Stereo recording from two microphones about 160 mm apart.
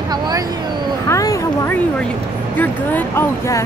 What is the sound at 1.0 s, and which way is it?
Speech, 20° left (ahead or behind).